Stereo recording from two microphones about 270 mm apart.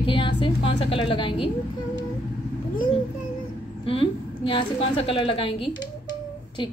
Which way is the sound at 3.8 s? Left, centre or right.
Centre.